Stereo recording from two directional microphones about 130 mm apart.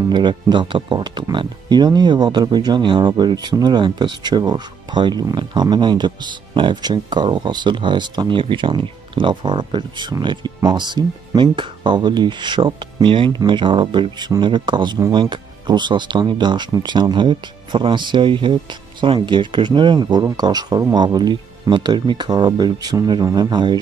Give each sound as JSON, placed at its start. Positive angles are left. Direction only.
{"t": 0.1, "sound": "speech", "side_deg": -35}